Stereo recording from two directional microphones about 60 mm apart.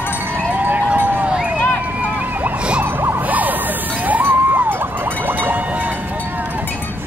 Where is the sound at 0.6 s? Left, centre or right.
Right.